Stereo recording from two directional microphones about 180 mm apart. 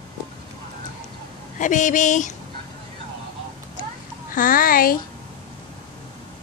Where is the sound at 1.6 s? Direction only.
45° left (ahead or behind).